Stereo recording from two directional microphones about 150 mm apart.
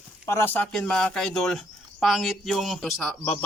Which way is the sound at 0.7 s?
5° left (ahead or behind).